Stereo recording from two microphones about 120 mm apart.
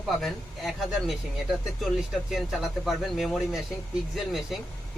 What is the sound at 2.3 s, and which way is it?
Speech, centre (ahead or behind).